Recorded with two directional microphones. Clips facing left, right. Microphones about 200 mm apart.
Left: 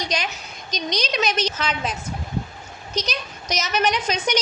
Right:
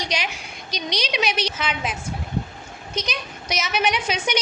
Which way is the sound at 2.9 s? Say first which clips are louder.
Left 1 dB; 40° left (ahead or behind).